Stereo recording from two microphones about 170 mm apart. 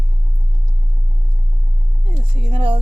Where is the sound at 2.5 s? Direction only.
30° right (ahead or behind).